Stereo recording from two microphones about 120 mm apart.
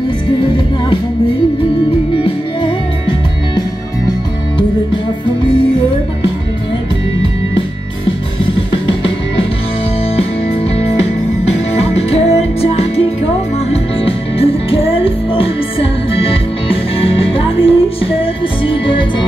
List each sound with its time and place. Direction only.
2.2 s music: 45° left (ahead or behind)
8.8 s music: 45° left (ahead or behind)
11.4 s music: 60° left (ahead or behind)